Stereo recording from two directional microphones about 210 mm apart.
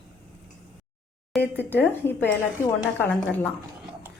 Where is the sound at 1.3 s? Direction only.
Centre (ahead or behind).